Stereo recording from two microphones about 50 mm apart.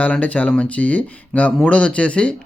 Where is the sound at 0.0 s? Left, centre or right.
Left.